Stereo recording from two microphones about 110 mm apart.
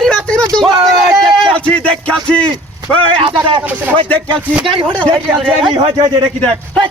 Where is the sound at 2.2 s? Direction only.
10° left (ahead or behind).